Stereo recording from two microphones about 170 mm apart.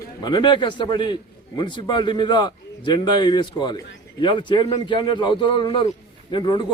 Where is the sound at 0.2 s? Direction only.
25° left (ahead or behind).